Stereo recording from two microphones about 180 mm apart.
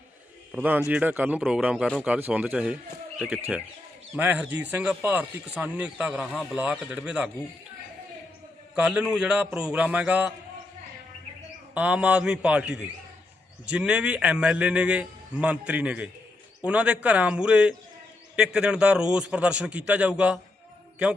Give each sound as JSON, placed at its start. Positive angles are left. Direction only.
{"t": 0.5, "sound": "a man's voice", "side_deg": -10}
{"t": 6.3, "sound": "a man's voice", "side_deg": 5}
{"t": 6.6, "sound": "a man's voice", "side_deg": -5}
{"t": 8.7, "sound": "a man's voice", "side_deg": -5}
{"t": 11.7, "sound": "a man's voice", "side_deg": -5}